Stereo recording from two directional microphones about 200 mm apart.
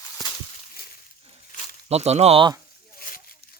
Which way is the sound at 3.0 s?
45° left (ahead or behind).